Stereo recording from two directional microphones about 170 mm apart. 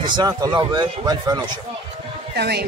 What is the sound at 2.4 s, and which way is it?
Speech, 70° right (ahead or behind).